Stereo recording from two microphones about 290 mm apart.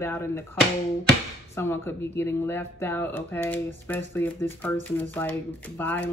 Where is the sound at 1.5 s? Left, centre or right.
Centre.